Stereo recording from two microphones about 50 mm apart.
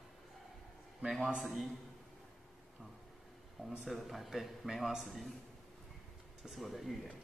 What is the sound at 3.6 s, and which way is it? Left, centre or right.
Speech, centre.